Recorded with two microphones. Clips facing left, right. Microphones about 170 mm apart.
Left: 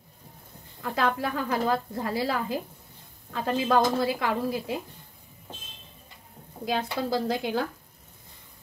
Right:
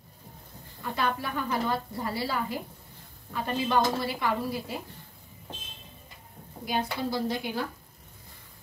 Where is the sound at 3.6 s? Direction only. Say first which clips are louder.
Left 3 dB; 90° left.